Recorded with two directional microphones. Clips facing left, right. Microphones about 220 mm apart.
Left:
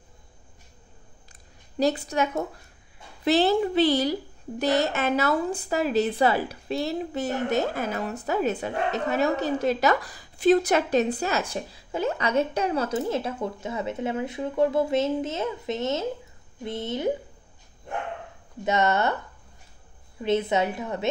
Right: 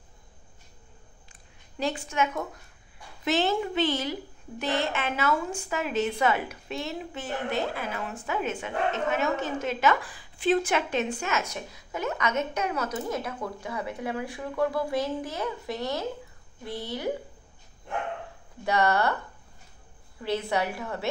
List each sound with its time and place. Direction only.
1.3 s a sound: 40° left (ahead or behind)
3.3 s a woman's voice: 35° left (ahead or behind)
18.6 s a woman's voice: 20° left (ahead or behind)
20.2 s a woman's voice: 20° left (ahead or behind)